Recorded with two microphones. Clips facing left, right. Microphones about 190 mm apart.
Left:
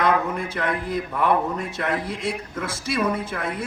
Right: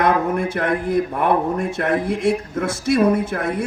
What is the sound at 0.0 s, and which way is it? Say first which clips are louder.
A woman's voice: right 4 dB; 50° right (ahead or behind).